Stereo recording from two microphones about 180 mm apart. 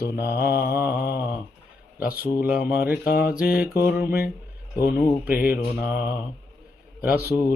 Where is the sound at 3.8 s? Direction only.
55° left (ahead or behind).